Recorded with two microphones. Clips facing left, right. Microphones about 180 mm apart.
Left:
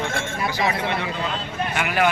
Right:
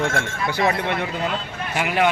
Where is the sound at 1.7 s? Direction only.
30° right (ahead or behind).